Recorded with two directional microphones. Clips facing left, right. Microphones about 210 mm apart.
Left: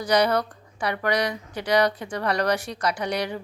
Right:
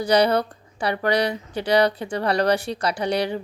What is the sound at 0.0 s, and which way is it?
Speech, 30° right (ahead or behind).